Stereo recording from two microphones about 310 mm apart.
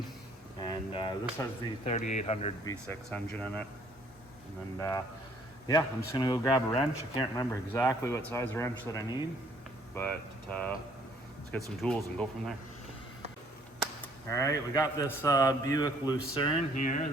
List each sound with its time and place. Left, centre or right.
0.6 s speech: centre
2.8 s speech: centre
4.8 s a man's voice: centre
14.3 s a man's voice: centre